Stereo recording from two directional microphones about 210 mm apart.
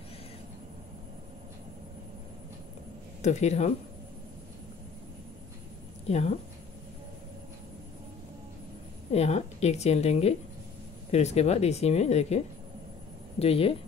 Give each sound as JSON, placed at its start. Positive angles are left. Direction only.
{"t": 3.2, "sound": "speech", "side_deg": 35}
{"t": 6.0, "sound": "speech", "side_deg": 30}
{"t": 9.1, "sound": "speech", "side_deg": 30}
{"t": 13.4, "sound": "speech", "side_deg": 30}